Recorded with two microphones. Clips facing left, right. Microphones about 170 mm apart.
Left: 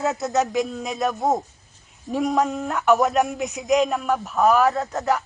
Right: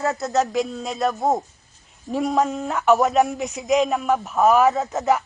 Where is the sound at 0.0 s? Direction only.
Centre (ahead or behind).